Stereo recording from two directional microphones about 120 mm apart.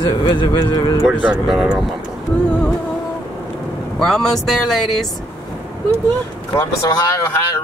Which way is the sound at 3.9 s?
5° left (ahead or behind).